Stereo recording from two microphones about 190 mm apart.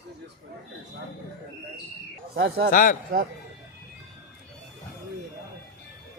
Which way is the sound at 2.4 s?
60° right (ahead or behind).